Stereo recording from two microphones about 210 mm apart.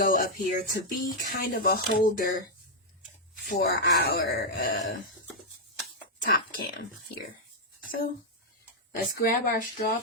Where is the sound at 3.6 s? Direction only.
50° left (ahead or behind).